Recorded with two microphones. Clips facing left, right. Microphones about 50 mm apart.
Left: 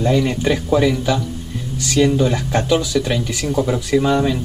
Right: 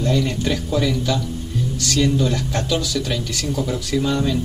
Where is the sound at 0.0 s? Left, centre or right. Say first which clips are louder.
Left 4 dB; centre.